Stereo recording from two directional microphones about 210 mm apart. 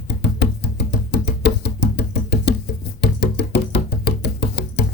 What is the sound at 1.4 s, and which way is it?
Music, 55° left (ahead or behind).